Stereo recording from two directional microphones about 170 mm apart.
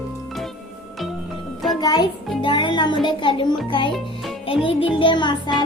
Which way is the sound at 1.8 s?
25° left (ahead or behind).